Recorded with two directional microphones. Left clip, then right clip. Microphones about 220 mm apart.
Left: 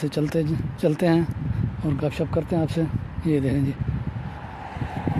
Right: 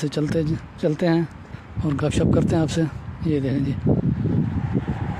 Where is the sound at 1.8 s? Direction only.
20° right (ahead or behind).